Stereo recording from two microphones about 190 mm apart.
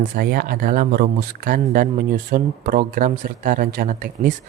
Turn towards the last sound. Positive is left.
turn(degrees=-45)  # may be behind; listen again after turning